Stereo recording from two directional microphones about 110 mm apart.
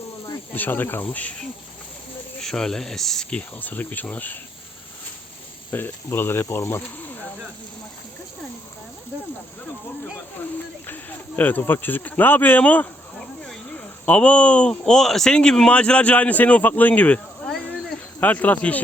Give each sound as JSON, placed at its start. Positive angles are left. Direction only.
{"t": 0.5, "sound": "speech", "side_deg": 15}
{"t": 5.7, "sound": "speech", "side_deg": 20}
{"t": 10.8, "sound": "speech", "side_deg": 15}